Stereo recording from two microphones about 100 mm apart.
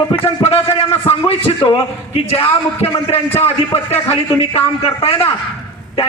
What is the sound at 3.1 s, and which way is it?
Speech, 85° left.